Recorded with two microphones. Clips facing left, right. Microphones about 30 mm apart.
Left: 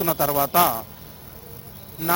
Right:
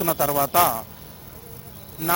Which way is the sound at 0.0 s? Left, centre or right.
Left.